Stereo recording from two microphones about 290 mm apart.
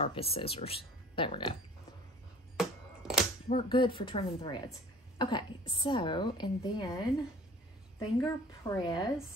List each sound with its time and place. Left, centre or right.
0.0 s speech: centre
2.6 s a sound: centre
3.4 s a woman's voice: centre
8.2 s a woman's voice: centre